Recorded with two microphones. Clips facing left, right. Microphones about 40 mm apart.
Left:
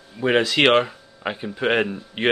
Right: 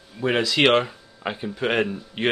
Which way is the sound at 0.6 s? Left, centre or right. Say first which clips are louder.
Right 1 dB; centre.